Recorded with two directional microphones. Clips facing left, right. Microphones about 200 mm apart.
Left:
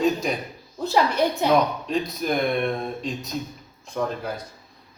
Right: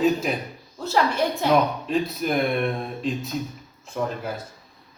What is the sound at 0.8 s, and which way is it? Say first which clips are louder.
Speech: left 1 dB; 15° left (ahead or behind).